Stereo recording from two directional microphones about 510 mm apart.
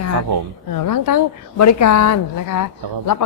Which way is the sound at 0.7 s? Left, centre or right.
Left.